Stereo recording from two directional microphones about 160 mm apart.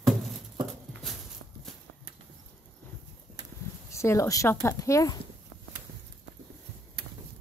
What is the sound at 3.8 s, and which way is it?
Speech, 20° left (ahead or behind).